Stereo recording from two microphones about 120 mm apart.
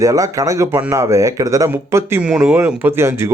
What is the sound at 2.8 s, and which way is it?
Speech, 20° right (ahead or behind).